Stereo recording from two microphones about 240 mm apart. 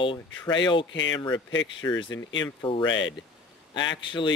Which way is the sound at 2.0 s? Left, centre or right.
Left.